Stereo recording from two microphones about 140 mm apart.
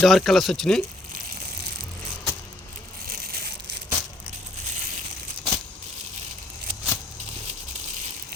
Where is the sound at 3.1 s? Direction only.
90° right.